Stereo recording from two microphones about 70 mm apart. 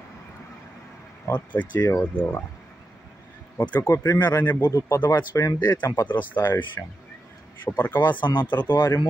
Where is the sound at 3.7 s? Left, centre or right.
Left.